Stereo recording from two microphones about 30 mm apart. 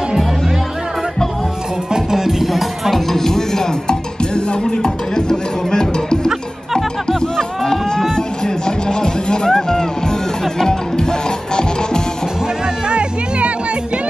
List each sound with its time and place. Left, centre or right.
2.0 s music: centre
2.4 s music: centre
3.1 s music: centre
7.1 s a sound: centre
8.6 s music: left
10.6 s music: left